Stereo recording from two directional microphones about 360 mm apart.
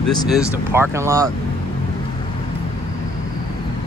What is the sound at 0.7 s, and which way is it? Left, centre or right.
Speech, centre.